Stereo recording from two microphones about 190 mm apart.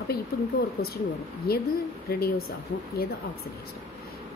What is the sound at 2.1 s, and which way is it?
Speech, 55° left (ahead or behind).